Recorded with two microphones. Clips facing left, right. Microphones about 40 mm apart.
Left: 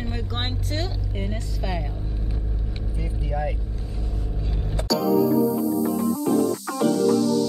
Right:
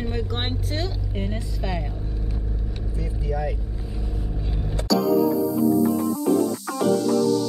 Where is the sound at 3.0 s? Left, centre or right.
Centre.